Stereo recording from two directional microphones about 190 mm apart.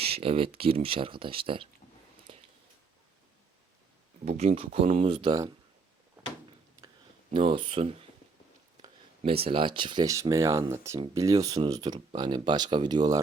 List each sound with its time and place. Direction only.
0.0 s speech: 30° right (ahead or behind)
4.3 s speech: 35° right (ahead or behind)
7.3 s speech: 30° right (ahead or behind)